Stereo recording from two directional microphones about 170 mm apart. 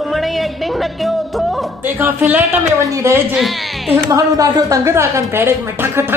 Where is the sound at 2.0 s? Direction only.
10° right (ahead or behind).